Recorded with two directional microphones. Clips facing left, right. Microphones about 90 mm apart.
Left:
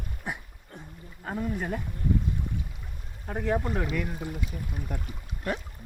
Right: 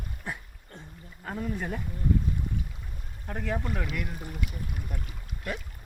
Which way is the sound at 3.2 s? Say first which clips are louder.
Left 4 dB; 15° left (ahead or behind).